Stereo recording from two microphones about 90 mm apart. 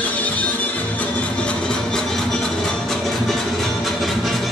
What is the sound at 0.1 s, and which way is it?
Music, 15° left (ahead or behind).